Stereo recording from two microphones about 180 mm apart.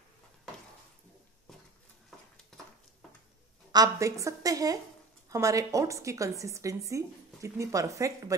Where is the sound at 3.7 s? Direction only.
20° right (ahead or behind).